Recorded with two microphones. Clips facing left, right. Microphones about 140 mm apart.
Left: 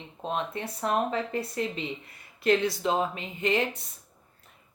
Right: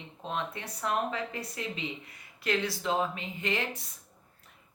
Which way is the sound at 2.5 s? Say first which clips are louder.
Left 6 dB; 20° left (ahead or behind).